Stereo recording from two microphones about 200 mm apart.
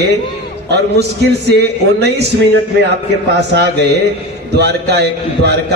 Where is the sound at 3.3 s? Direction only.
55° right (ahead or behind).